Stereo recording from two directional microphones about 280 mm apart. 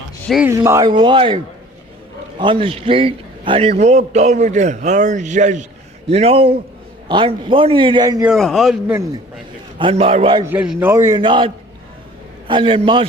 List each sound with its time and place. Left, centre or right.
0.3 s a man's voice: centre
2.4 s a man's voice: centre
8.3 s speech: centre
9.7 s a man's voice: centre